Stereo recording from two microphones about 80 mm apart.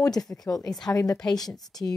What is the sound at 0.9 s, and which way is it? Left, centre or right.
Speech, left.